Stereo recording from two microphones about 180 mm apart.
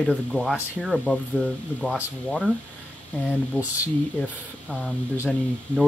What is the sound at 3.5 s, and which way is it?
Speech, 10° left (ahead or behind).